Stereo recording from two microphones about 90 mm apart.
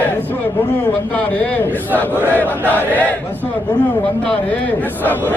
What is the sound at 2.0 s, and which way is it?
Crowd, 20° left (ahead or behind).